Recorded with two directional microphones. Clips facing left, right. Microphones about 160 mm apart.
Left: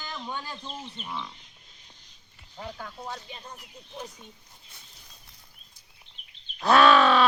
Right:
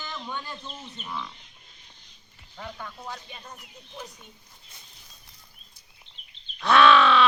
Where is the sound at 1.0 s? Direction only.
25° left (ahead or behind).